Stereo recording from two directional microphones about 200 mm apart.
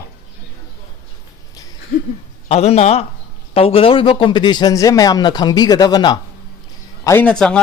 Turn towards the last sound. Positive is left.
turn(degrees=5)  # may be behind; listen again after turning